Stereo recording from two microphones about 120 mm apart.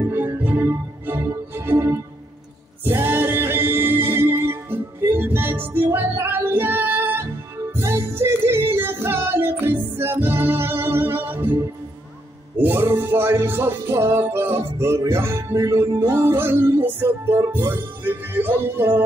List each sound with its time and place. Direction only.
0.0 s music: 15° right (ahead or behind)